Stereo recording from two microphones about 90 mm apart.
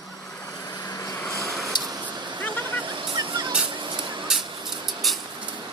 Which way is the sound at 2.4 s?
20° left (ahead or behind).